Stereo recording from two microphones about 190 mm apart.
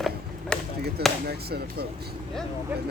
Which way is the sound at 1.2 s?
55° right (ahead or behind).